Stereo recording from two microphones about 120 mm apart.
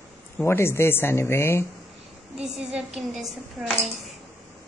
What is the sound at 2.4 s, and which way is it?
A woman's voice, 5° right (ahead or behind).